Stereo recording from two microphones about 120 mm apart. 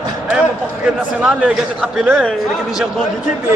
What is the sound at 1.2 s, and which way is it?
Speech, 5° right (ahead or behind).